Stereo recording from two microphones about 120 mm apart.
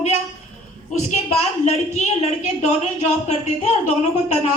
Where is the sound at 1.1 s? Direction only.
75° left (ahead or behind).